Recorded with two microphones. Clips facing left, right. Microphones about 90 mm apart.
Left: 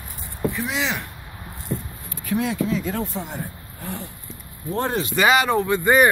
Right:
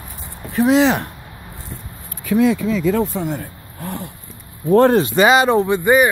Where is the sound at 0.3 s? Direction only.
60° right (ahead or behind).